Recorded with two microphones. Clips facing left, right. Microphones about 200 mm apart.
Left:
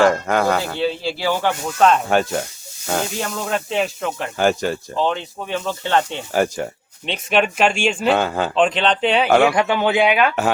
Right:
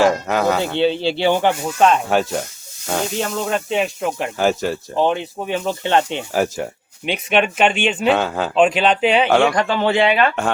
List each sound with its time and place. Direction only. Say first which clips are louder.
0.0 s speech: even; 5° right (ahead or behind)
0.8 s speech: right 5 dB; 25° right (ahead or behind)
1.6 s speech: even; 10° right (ahead or behind)
4.9 s speech: right 6 dB; 15° right (ahead or behind)
6.3 s speech: left 1 dB; centre (ahead or behind)